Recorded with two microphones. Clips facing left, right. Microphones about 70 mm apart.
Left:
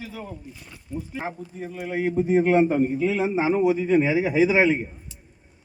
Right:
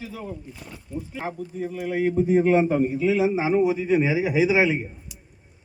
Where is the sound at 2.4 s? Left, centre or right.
Left.